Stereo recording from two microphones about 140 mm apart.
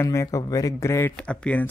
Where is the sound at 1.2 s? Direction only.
10° left (ahead or behind).